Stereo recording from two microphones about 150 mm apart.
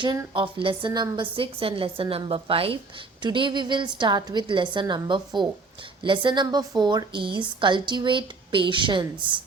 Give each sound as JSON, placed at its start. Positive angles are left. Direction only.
{"t": 0.3, "sound": "a woman's voice", "side_deg": -35}